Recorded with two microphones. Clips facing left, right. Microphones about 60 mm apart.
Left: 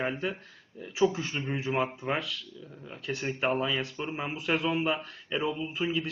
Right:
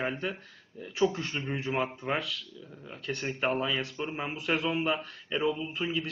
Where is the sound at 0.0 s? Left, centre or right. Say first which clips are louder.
Left 1 dB; centre.